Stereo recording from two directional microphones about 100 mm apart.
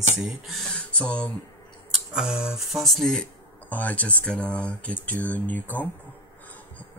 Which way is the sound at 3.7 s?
15° left (ahead or behind).